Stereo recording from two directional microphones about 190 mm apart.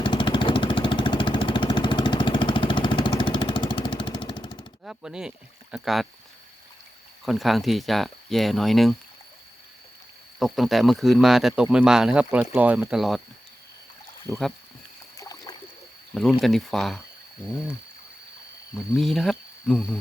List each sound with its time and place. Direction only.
0.0 s vehicle: 25° left (ahead or behind)
4.9 s speech: 5° right (ahead or behind)
7.3 s speech: centre (ahead or behind)
10.4 s speech: centre (ahead or behind)
14.3 s speech: 15° right (ahead or behind)
15.2 s a sound: 20° left (ahead or behind)
16.1 s speech: centre (ahead or behind)
18.9 s speech: centre (ahead or behind)